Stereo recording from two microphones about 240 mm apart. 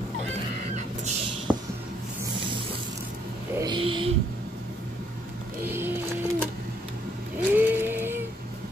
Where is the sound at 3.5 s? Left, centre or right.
Centre.